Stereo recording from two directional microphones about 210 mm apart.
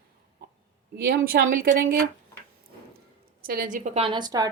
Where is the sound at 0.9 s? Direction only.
45° right (ahead or behind).